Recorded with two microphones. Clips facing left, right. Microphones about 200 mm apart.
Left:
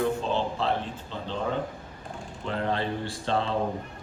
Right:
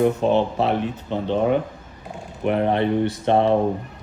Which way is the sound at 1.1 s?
65° right (ahead or behind).